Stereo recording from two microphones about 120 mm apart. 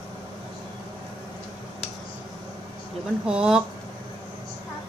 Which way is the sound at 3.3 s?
5° right (ahead or behind).